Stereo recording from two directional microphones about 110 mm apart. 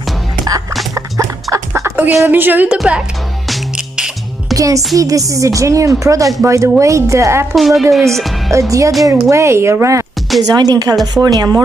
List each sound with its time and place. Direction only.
0.9 s dog: 30° right (ahead or behind)
2.2 s a woman's voice: 15° right (ahead or behind)
3.4 s music: 5° right (ahead or behind)
4.6 s a woman's voice: 30° right (ahead or behind)
7.5 s a woman's voice: centre (ahead or behind)
8.5 s speech: 30° right (ahead or behind)
10.4 s a woman's voice: 35° right (ahead or behind)